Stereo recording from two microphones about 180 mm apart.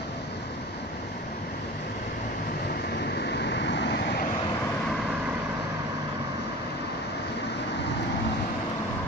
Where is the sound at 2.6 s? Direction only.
65° left (ahead or behind).